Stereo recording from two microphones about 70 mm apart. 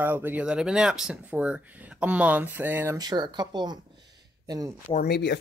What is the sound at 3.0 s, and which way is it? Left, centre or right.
Speech, right.